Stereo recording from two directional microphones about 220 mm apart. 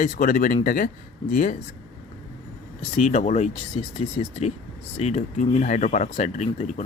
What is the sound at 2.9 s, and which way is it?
Speech, 30° left (ahead or behind).